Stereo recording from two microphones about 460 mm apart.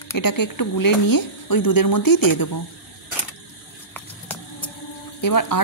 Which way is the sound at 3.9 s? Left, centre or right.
Centre.